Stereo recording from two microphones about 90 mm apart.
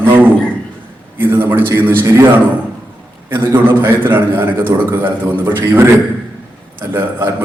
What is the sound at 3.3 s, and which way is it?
A man's voice, 25° right (ahead or behind).